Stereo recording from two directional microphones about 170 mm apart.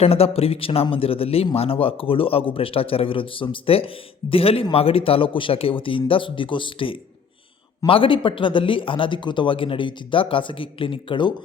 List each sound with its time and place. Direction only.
0.0 s a man's voice: 35° left (ahead or behind)